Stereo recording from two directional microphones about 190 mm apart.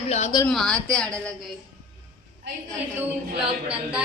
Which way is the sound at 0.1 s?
35° left (ahead or behind).